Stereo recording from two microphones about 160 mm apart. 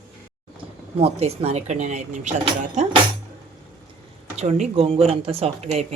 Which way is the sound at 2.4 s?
35° right (ahead or behind).